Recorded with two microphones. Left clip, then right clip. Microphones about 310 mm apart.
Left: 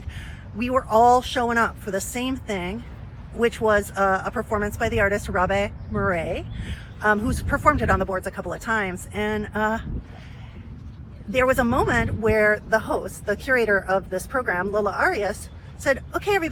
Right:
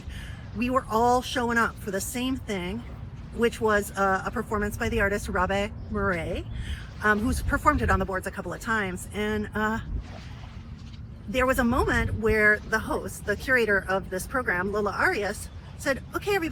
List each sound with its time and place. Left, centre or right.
0.6 s speech: centre
11.3 s speech: centre